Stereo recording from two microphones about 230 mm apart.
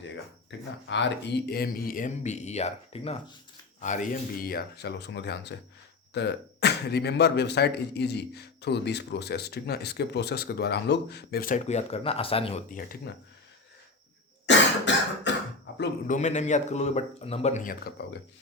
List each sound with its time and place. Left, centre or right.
0.9 s speech: left
12.7 s speech: left
14.4 s cough: left
15.8 s speech: left